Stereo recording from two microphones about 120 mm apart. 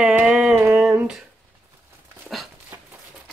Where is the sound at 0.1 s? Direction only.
10° right (ahead or behind).